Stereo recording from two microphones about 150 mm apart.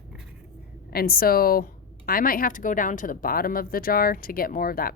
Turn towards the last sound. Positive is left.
turn(degrees=75)  # may be behind; listen again after turning